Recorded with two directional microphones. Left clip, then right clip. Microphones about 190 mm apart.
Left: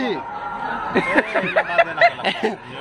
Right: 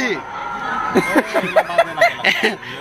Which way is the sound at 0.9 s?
60° right (ahead or behind).